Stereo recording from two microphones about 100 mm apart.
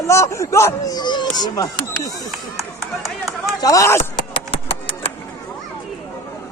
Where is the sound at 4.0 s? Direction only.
70° left (ahead or behind).